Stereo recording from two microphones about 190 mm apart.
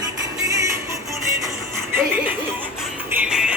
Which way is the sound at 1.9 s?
10° right (ahead or behind).